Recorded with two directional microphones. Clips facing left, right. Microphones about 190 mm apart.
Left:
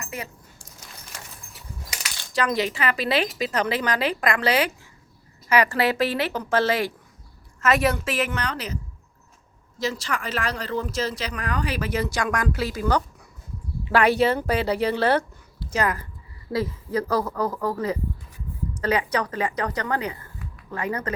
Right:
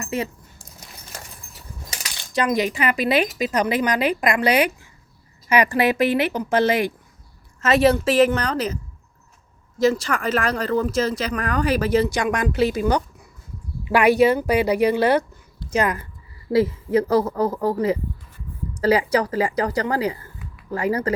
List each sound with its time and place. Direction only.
0.0 s a sound: 25° right (ahead or behind)
2.3 s a woman's voice: 15° right (ahead or behind); by 12.0 s 35° right (ahead or behind)
12.0 s a woman's voice: 20° right (ahead or behind)